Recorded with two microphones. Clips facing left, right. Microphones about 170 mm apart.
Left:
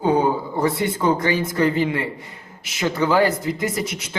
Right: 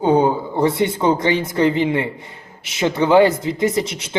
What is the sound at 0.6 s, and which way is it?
A man's voice, 25° right (ahead or behind).